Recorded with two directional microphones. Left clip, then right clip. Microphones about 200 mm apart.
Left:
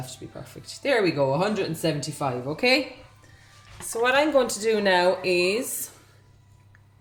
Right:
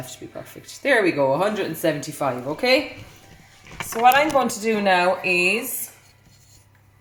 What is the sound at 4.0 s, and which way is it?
Speech, 45° left (ahead or behind).